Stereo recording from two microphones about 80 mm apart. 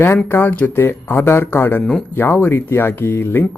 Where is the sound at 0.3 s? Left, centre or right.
Left.